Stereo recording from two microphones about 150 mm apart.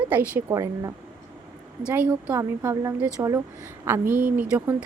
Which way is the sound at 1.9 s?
10° right (ahead or behind).